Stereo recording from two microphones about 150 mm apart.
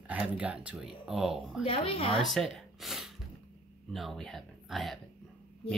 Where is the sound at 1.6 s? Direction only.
35° left (ahead or behind).